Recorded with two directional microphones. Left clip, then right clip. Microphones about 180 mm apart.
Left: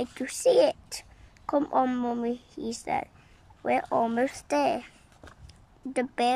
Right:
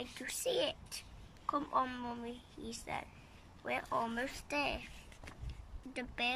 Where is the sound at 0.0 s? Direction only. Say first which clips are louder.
Left 14 dB; 30° left (ahead or behind).